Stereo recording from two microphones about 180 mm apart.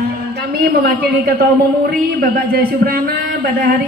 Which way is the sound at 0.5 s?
55° right (ahead or behind).